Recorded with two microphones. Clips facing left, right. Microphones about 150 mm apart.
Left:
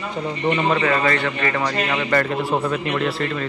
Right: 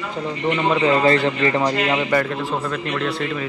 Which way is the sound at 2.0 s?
10° right (ahead or behind).